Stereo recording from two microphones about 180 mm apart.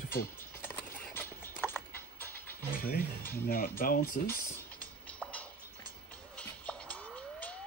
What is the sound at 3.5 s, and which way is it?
Speech, 50° left (ahead or behind).